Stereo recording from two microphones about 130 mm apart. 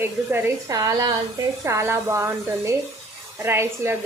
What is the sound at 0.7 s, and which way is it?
A woman's voice, 30° right (ahead or behind).